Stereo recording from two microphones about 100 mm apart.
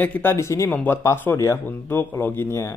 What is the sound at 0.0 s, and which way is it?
Speech, 20° left (ahead or behind).